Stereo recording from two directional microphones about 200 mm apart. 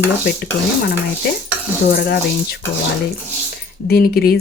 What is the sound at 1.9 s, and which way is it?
Speech, 50° left (ahead or behind).